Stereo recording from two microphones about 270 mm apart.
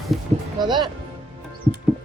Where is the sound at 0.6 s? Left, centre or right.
Centre.